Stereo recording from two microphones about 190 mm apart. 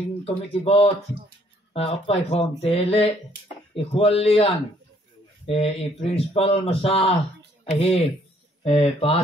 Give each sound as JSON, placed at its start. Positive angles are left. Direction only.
{"t": 0.2, "sound": "speech", "side_deg": 30}
{"t": 5.5, "sound": "speech", "side_deg": 30}